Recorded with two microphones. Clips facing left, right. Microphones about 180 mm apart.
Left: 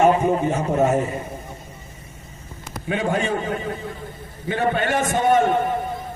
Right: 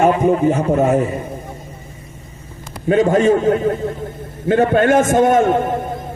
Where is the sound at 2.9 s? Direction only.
45° right (ahead or behind).